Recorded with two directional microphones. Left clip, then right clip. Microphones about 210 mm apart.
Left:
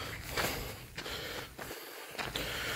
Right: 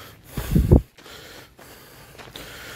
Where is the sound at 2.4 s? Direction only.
25° right (ahead or behind).